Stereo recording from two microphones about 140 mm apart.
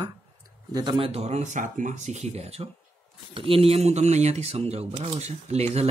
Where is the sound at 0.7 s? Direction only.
30° right (ahead or behind).